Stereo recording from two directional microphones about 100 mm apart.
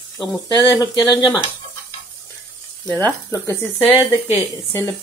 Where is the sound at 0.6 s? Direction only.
40° left (ahead or behind).